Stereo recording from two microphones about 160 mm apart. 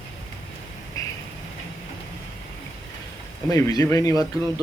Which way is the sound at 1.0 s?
20° left (ahead or behind).